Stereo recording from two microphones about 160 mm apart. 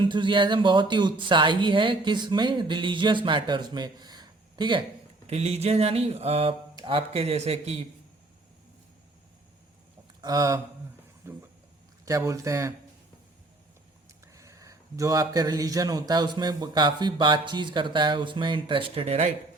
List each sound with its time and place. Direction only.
0.0 s speech: 30° right (ahead or behind)
5.2 s speech: 40° right (ahead or behind)
10.2 s speech: 25° right (ahead or behind)
14.3 s speech: 20° right (ahead or behind); by 19.3 s 45° right (ahead or behind)